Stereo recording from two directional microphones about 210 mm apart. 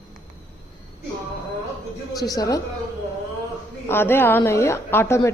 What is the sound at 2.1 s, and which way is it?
Speech, 20° left (ahead or behind).